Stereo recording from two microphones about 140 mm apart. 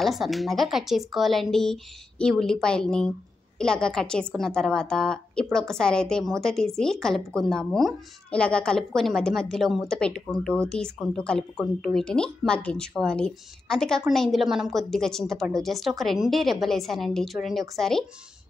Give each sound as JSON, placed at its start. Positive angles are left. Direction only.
{"t": 0.0, "sound": "a woman's voice", "side_deg": 0}